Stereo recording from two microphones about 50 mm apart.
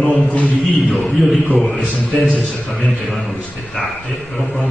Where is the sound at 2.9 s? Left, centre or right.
Centre.